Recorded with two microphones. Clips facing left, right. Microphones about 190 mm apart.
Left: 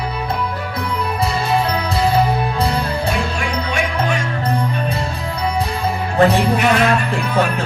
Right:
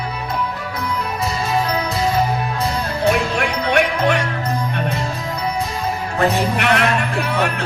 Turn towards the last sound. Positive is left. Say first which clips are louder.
# left 2 dB
turn(degrees=-70)  # may be behind; listen again after turning